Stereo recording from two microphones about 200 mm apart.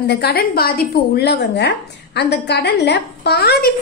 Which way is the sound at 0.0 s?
55° left (ahead or behind).